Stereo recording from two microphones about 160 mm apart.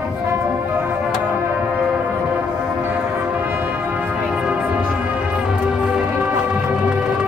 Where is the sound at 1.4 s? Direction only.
10° right (ahead or behind).